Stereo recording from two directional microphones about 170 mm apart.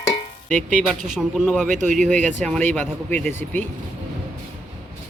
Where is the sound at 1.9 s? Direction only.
5° left (ahead or behind).